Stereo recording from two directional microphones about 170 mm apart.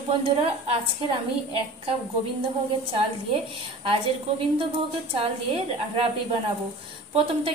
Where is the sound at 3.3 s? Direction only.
30° right (ahead or behind).